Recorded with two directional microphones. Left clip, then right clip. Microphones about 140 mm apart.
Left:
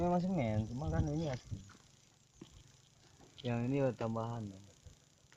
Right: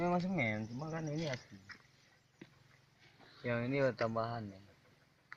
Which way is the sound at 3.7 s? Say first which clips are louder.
Right 1 dB; 70° left (ahead or behind).